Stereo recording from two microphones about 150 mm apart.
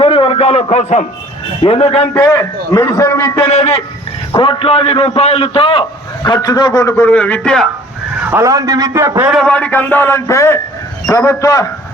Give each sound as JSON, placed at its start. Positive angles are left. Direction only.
{"t": 0.0, "sound": "a sound", "side_deg": 35}
{"t": 1.6, "sound": "a man's voice", "side_deg": 40}
{"t": 2.3, "sound": "a man's voice", "side_deg": 20}
{"t": 3.4, "sound": "a man's voice", "side_deg": 45}
{"t": 4.4, "sound": "a man's voice", "side_deg": 35}
{"t": 6.2, "sound": "a man's voice", "side_deg": 25}
{"t": 8.3, "sound": "a man's voice", "side_deg": -20}
{"t": 9.3, "sound": "a man's voice", "side_deg": 5}